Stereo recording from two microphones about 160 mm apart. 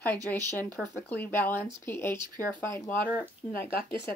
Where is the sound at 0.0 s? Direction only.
10° left (ahead or behind).